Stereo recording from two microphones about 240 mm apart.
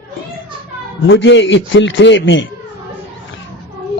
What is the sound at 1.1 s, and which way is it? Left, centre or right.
A man's voice, left.